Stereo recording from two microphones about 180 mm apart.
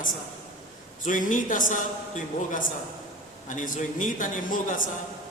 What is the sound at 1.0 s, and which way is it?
A man's voice, 45° left (ahead or behind).